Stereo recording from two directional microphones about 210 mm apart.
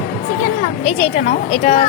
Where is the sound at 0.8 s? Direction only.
30° left (ahead or behind).